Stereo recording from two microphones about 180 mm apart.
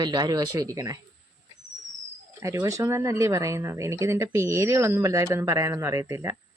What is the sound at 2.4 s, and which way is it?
Speech, 15° right (ahead or behind).